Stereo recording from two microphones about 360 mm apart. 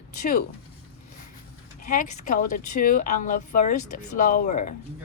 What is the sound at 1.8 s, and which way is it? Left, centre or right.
A woman's voice, left.